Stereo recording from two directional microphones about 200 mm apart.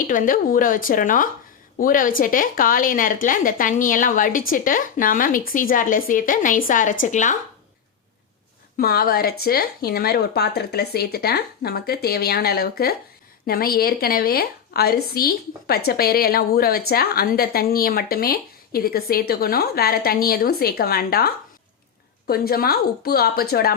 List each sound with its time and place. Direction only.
0.1 s a woman's voice: 45° left (ahead or behind)
8.8 s a woman's voice: 50° left (ahead or behind)